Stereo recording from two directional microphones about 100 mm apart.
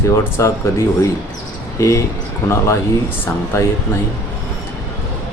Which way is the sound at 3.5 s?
30° left (ahead or behind).